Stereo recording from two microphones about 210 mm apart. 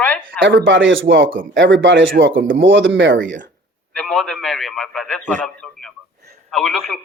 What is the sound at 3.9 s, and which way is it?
A man's voice, 5° left (ahead or behind).